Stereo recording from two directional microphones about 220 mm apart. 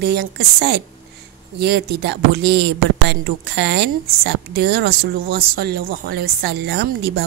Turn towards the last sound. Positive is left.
turn(degrees=-45)  # may be behind; listen again after turning